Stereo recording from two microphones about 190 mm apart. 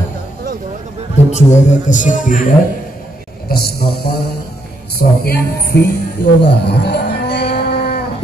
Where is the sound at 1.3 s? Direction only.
40° left (ahead or behind).